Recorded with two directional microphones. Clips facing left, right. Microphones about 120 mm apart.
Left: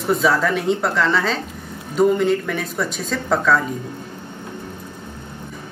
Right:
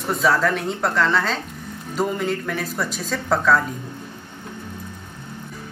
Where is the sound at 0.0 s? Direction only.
Centre (ahead or behind).